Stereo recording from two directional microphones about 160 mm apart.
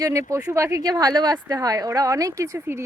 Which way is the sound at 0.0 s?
20° right (ahead or behind).